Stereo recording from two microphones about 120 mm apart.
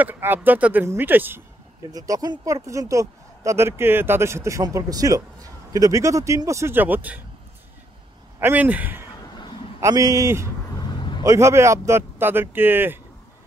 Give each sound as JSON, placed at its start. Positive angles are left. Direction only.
{"t": 0.0, "sound": "speech", "side_deg": -15}
{"t": 1.9, "sound": "speech", "side_deg": -30}
{"t": 8.4, "sound": "speech", "side_deg": -15}
{"t": 9.8, "sound": "speech", "side_deg": -25}
{"t": 10.8, "sound": "vehicle", "side_deg": 40}
{"t": 11.2, "sound": "speech", "side_deg": -25}